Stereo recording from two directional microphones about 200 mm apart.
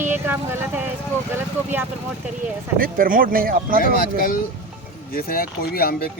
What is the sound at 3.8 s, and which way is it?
Speech, 45° left (ahead or behind).